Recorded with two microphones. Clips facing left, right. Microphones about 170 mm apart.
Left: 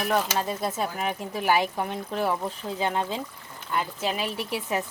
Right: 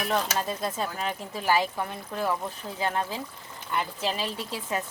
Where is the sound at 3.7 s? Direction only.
Centre (ahead or behind).